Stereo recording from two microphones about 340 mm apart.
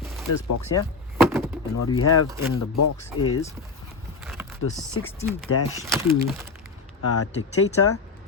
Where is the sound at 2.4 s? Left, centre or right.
Left.